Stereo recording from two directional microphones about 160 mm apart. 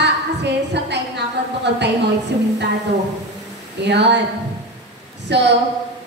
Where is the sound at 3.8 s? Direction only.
90° right.